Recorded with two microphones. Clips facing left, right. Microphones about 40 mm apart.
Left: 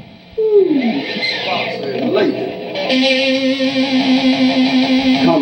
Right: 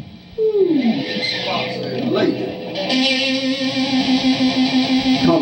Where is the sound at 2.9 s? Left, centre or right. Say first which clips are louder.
Left 5 dB; centre.